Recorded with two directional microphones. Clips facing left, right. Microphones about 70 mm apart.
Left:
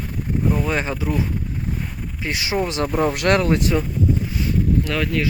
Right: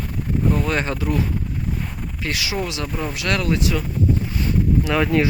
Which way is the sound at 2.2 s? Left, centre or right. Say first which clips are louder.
Left 1 dB; left.